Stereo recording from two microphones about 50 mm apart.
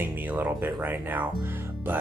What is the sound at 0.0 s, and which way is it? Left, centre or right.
Speech, right.